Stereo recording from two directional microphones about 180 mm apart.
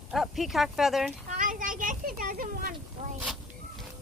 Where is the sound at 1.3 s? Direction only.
50° right (ahead or behind).